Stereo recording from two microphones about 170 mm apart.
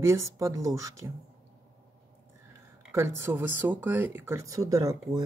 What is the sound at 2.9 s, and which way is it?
Speech, 15° right (ahead or behind).